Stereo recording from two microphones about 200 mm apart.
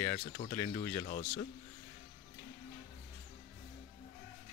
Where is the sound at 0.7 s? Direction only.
25° left (ahead or behind).